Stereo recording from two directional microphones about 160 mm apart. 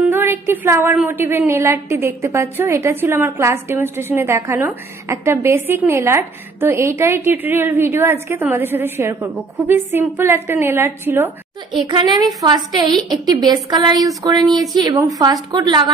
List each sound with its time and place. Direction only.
0.1 s a woman's voice: 15° right (ahead or behind)
11.7 s a woman's voice: 30° right (ahead or behind)